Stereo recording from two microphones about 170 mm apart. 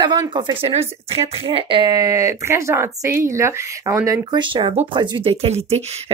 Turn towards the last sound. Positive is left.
turn(degrees=-40)  # may be behind; listen again after turning